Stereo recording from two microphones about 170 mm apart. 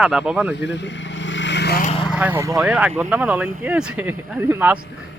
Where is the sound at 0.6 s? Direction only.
90° left.